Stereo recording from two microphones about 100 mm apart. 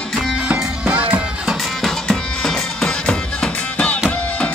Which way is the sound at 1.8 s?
Centre (ahead or behind).